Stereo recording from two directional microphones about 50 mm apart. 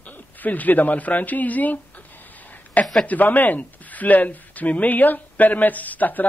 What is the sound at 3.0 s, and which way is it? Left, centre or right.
Speech, left.